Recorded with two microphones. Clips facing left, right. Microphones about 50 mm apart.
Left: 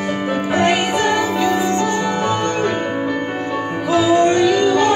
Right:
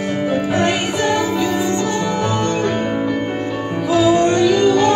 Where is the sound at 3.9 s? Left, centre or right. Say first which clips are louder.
Even; centre.